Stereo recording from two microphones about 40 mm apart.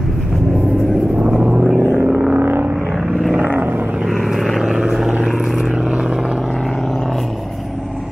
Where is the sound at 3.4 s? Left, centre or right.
Right.